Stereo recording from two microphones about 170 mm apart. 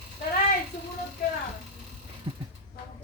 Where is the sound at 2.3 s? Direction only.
30° right (ahead or behind).